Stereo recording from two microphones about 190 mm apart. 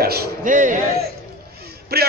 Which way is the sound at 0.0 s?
55° right (ahead or behind).